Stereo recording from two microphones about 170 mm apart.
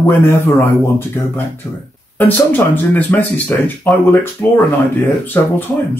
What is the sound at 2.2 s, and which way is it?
Speech, 10° left (ahead or behind).